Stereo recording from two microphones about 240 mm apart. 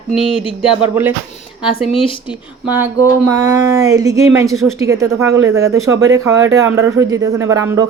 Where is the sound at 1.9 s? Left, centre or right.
Left.